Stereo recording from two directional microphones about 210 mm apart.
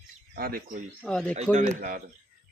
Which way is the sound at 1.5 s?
35° right (ahead or behind).